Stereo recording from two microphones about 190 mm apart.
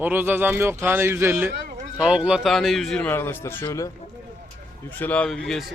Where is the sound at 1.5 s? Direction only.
55° right (ahead or behind).